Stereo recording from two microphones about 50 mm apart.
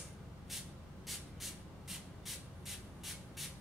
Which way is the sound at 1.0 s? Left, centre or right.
Centre.